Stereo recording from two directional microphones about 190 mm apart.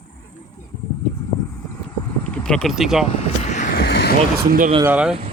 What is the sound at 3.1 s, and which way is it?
Vehicle, 35° left (ahead or behind).